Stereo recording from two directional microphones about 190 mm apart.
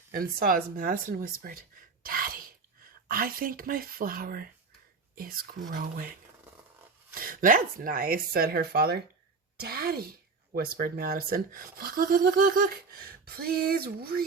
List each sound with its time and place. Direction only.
0.1 s speech: 50° right (ahead or behind)
2.0 s a sound: 50° right (ahead or behind)
3.1 s speech: 50° right (ahead or behind)
7.1 s speech: 50° right (ahead or behind)